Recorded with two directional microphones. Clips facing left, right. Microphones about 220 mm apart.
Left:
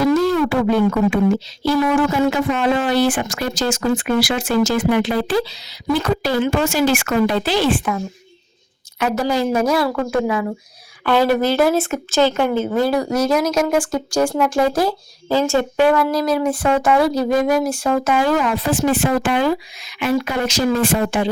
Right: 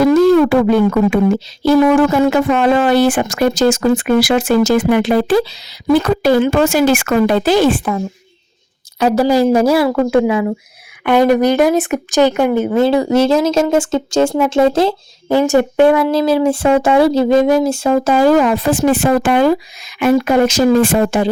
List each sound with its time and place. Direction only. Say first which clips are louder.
0.0 s speech: right 7 dB; 50° right (ahead or behind)
9.0 s a woman's voice: right 7 dB; 35° right (ahead or behind)